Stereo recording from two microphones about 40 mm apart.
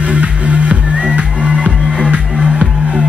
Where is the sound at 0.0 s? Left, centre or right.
Right.